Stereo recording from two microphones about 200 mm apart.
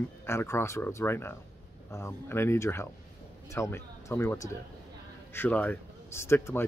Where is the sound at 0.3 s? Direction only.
10° left (ahead or behind).